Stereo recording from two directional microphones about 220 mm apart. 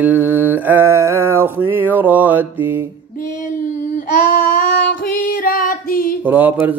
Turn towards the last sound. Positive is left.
turn(degrees=-10)  # may be behind; listen again after turning